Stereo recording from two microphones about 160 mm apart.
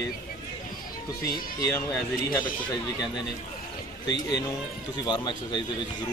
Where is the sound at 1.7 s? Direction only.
15° left (ahead or behind).